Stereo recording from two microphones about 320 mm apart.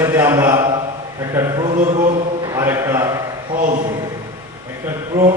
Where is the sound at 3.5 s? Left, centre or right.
Right.